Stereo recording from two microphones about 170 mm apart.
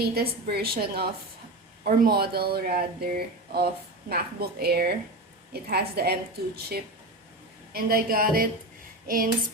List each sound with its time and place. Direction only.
0.0 s a woman's voice: 65° right (ahead or behind)
7.7 s speech: 60° right (ahead or behind)